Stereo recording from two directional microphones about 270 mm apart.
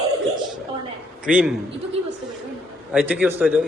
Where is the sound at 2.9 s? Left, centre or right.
Centre.